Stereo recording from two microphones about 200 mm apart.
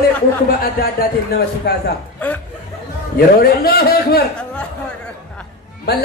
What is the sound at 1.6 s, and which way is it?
Speech, 55° left (ahead or behind).